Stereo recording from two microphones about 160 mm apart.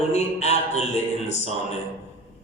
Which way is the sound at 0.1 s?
45° left (ahead or behind).